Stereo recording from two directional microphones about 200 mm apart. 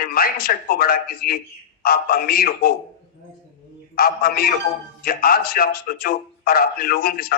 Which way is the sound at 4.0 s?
50° left (ahead or behind).